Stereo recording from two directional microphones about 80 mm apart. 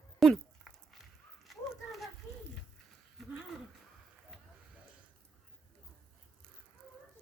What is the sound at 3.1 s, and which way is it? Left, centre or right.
Speech, centre.